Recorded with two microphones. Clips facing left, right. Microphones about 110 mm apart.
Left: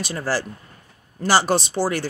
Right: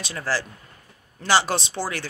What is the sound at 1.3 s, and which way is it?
Speech, centre (ahead or behind).